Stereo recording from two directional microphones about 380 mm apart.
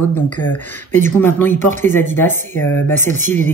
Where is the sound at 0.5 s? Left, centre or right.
Centre.